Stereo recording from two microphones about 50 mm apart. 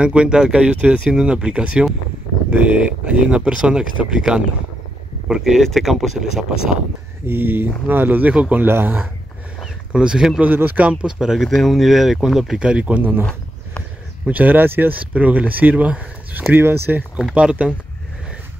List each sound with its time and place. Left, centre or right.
0.0 s speech: right
5.6 s speech: centre
7.2 s speech: right
8.6 s speech: right
9.9 s speech: centre
10.4 s speech: right
11.1 s speech: centre
12.5 s speech: right
13.0 s speech: right
15.0 s speech: right
16.5 s speech: right
17.3 s speech: right